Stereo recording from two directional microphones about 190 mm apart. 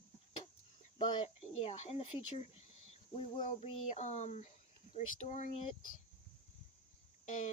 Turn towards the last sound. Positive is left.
turn(degrees=40)  # may be behind; listen again after turning